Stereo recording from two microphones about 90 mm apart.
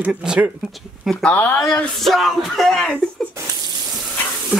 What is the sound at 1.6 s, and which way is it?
Speech, 5° left (ahead or behind).